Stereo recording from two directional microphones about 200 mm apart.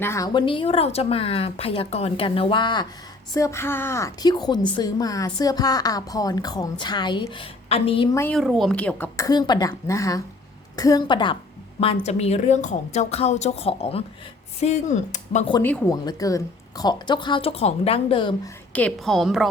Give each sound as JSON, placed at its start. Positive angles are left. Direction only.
{"t": 0.0, "sound": "a woman's voice", "side_deg": 15}
{"t": 8.2, "sound": "a woman's voice", "side_deg": 5}
{"t": 11.9, "sound": "a woman's voice", "side_deg": 35}
{"t": 15.6, "sound": "a woman's voice", "side_deg": 10}
{"t": 18.7, "sound": "a woman's voice", "side_deg": 5}